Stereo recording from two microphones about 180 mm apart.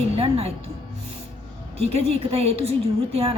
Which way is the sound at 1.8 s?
35° right (ahead or behind).